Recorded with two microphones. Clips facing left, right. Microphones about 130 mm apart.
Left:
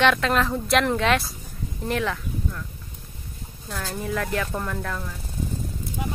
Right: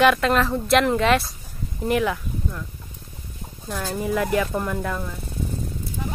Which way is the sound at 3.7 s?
10° right (ahead or behind).